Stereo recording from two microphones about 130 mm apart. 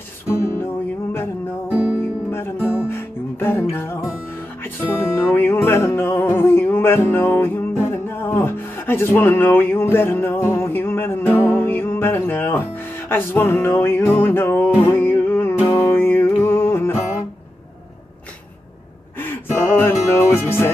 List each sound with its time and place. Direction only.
0.4 s music: 20° left (ahead or behind)
1.7 s music: 10° right (ahead or behind)
2.3 s music: 20° left (ahead or behind)
19.1 s music: 15° left (ahead or behind)